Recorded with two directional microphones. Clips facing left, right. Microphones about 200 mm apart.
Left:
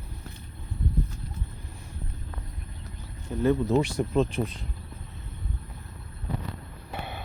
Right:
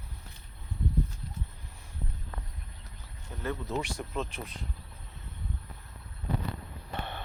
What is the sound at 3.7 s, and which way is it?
Speech, 35° left (ahead or behind).